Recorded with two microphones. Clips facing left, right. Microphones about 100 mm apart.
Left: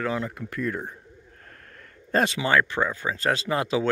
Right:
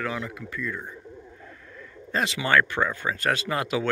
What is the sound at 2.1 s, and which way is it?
Speech, 45° left (ahead or behind).